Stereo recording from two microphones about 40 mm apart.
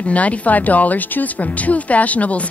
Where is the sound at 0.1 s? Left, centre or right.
Left.